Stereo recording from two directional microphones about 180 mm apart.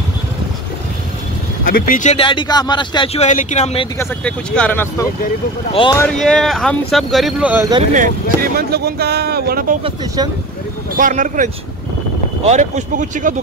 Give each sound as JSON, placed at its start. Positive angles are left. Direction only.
{"t": 1.6, "sound": "speech", "side_deg": 55}
{"t": 2.1, "sound": "speech", "side_deg": 25}
{"t": 4.0, "sound": "speech", "side_deg": 5}
{"t": 5.7, "sound": "speech", "side_deg": 30}
{"t": 5.9, "sound": "speech", "side_deg": 5}
{"t": 7.9, "sound": "speech", "side_deg": -50}
{"t": 9.8, "sound": "speech", "side_deg": -25}
{"t": 11.0, "sound": "speech", "side_deg": -45}